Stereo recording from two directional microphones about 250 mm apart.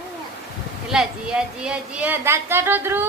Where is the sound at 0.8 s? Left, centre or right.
Centre.